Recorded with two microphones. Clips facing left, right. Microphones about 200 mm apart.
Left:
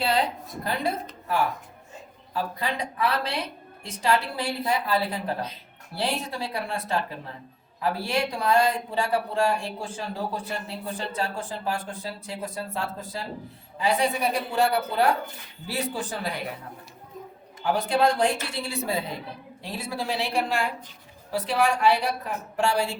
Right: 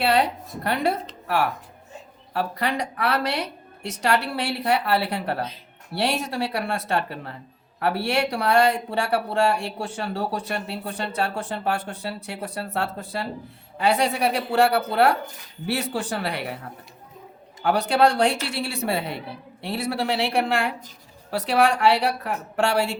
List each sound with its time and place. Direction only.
0.0 s a woman's voice: 70° right (ahead or behind)
2.3 s speech: 70° right (ahead or behind)
17.6 s speech: 70° right (ahead or behind)